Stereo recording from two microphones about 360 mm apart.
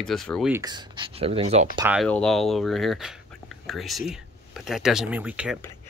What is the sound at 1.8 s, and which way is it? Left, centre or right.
Speech, centre.